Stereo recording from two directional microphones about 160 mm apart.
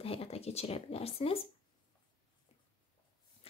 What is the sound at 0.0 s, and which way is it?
Speech, 35° left (ahead or behind).